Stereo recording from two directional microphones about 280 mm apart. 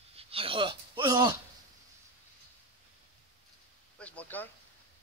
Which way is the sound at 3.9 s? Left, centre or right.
Centre.